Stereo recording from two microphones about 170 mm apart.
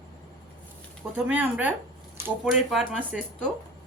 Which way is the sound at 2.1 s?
10° right (ahead or behind).